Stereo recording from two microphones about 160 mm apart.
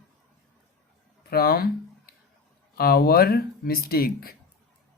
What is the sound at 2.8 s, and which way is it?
Speech, 75° left (ahead or behind).